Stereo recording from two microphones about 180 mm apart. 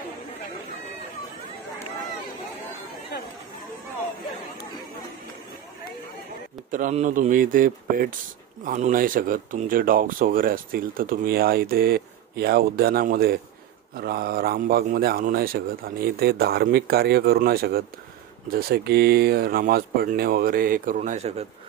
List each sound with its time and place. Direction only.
6.7 s a man's voice: 40° right (ahead or behind)